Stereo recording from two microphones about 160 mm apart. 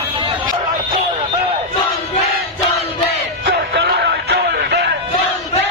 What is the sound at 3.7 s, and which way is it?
Music, 90° right.